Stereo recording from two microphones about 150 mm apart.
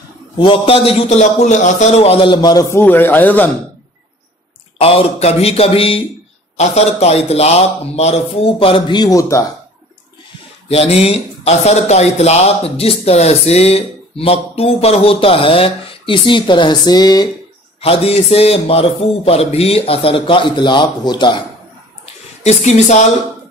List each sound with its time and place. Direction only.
0.4 s speech: 35° left (ahead or behind)
2.3 s a man's voice: 25° left (ahead or behind)
2.8 s speech: 15° left (ahead or behind)
4.7 s speech: 40° left (ahead or behind); by 9.5 s 20° left (ahead or behind)
10.7 s speech: 40° left (ahead or behind)
17.7 s speech: 40° left (ahead or behind)
22.0 s a sound: 45° left (ahead or behind)